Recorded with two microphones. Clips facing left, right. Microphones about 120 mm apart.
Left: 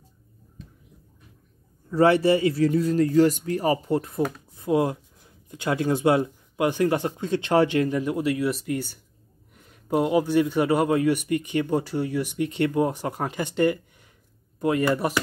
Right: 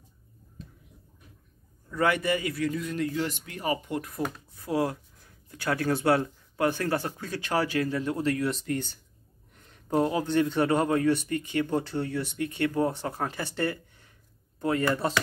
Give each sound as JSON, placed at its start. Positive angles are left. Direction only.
{"t": 1.9, "sound": "a man's voice", "side_deg": 30}